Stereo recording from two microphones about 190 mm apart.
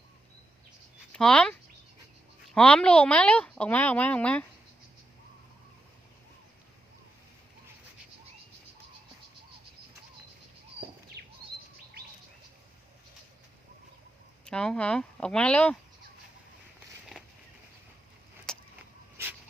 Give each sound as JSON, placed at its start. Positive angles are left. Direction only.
{"t": 1.1, "sound": "a woman's voice", "side_deg": 5}
{"t": 11.2, "sound": "bird", "side_deg": -60}
{"t": 14.4, "sound": "speech", "side_deg": 5}
{"t": 18.5, "sound": "vehicle", "side_deg": 5}
{"t": 19.1, "sound": "a sound", "side_deg": -10}